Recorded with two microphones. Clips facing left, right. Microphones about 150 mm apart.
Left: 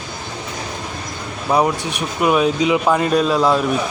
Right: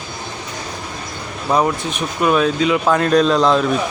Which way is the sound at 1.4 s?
10° left (ahead or behind).